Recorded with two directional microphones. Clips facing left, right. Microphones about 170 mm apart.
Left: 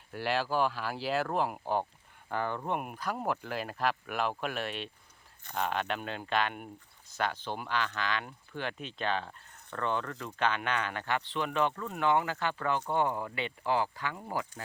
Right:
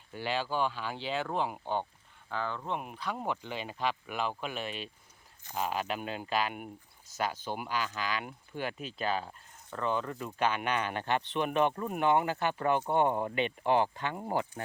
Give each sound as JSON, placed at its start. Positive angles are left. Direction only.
{"t": 0.1, "sound": "speech", "side_deg": 5}
{"t": 2.3, "sound": "speech", "side_deg": 55}
{"t": 2.6, "sound": "speech", "side_deg": 10}